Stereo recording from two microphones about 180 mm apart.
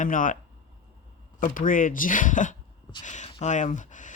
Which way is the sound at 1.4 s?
50° left (ahead or behind).